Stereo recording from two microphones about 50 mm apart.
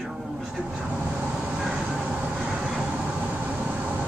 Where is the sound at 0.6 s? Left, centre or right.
Centre.